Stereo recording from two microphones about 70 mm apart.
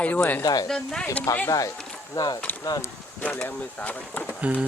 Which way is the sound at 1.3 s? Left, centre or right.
Left.